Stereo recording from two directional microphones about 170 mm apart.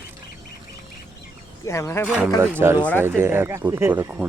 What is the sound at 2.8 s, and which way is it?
Speech, 10° left (ahead or behind).